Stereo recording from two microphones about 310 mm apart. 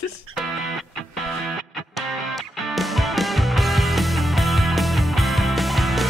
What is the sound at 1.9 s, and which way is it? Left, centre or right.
Music, centre.